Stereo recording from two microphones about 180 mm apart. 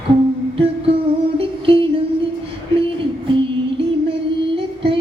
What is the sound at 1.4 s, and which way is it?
Music, 30° right (ahead or behind).